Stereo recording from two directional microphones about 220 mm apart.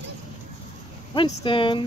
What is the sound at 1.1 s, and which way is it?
Speech, 20° left (ahead or behind).